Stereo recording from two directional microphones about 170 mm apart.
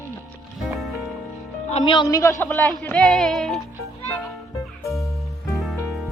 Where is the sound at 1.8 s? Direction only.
25° left (ahead or behind).